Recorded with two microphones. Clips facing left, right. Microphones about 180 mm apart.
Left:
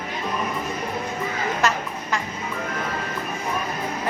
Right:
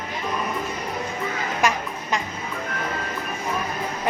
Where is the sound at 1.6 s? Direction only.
10° right (ahead or behind).